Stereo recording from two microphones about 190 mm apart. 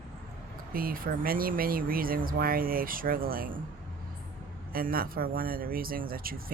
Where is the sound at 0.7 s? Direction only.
50° right (ahead or behind).